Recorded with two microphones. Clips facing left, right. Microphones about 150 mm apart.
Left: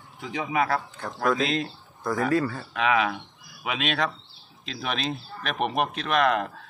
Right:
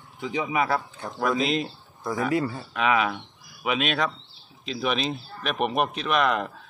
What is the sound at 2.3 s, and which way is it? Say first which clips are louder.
Speech: left 1 dB; 20° right (ahead or behind).